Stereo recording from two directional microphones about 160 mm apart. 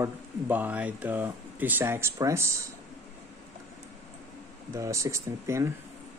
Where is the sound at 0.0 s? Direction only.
10° right (ahead or behind).